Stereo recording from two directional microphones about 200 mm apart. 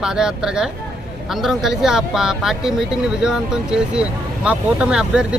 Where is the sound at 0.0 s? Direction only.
5° right (ahead or behind).